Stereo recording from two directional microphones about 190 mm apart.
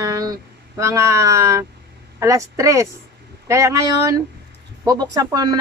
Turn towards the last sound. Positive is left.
turn(degrees=-20)  # may be behind; listen again after turning